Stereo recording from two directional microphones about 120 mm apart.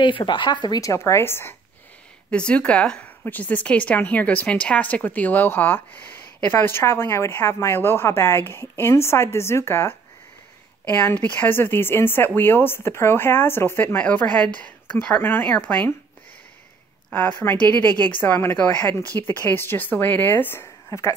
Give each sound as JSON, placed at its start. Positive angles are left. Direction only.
{"t": 0.0, "sound": "speech", "side_deg": 40}
{"t": 2.3, "sound": "a woman's voice", "side_deg": 10}
{"t": 17.1, "sound": "a woman's voice", "side_deg": 15}